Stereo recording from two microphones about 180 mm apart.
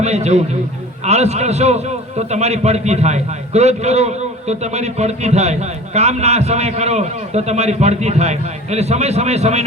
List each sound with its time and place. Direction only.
0.0 s a man's voice: 35° right (ahead or behind)